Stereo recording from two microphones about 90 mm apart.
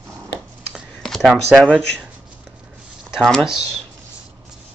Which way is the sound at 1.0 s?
5° left (ahead or behind).